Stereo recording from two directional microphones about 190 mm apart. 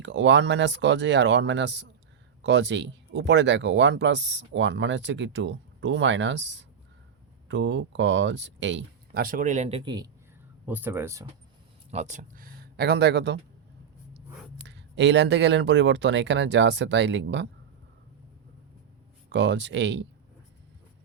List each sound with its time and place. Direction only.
0.0 s speech: 70° right (ahead or behind)
9.2 s speech: 45° right (ahead or behind); by 10.1 s 20° right (ahead or behind)
10.7 s speech: 10° right (ahead or behind)
11.9 s speech: 35° right (ahead or behind); by 13.4 s 60° right (ahead or behind)
14.6 s speech: 65° right (ahead or behind)
19.3 s speech: 65° right (ahead or behind)